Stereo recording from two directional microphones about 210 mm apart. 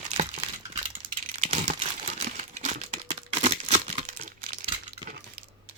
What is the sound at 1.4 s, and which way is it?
Computer keyboard, 30° right (ahead or behind).